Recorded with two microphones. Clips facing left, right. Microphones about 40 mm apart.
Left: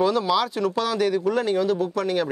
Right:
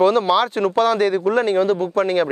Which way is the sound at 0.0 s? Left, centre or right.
Right.